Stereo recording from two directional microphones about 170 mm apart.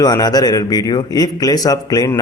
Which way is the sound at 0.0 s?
20° left (ahead or behind).